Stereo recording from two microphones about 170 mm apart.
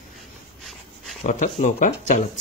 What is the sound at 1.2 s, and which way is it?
Speech, 45° left (ahead or behind).